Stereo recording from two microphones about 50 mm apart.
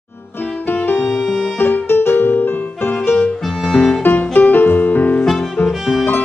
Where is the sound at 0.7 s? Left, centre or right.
Left.